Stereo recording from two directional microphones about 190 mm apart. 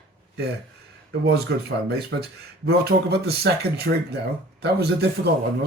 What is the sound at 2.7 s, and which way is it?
Speech, 55° right (ahead or behind).